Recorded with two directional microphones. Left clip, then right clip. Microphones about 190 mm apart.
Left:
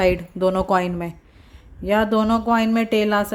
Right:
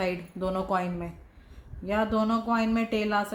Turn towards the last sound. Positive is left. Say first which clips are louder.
# left 8 dB
turn(degrees=50)  # may be behind; listen again after turning